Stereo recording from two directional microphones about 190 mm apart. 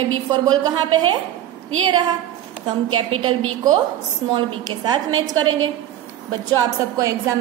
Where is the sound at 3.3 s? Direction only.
90° right.